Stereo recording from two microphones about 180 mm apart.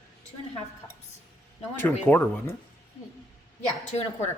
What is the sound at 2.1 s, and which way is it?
Speech, 15° left (ahead or behind).